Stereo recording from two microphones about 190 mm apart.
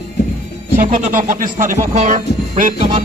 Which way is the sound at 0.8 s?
45° right (ahead or behind).